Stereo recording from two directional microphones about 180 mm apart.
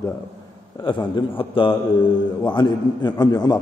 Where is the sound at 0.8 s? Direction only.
25° left (ahead or behind).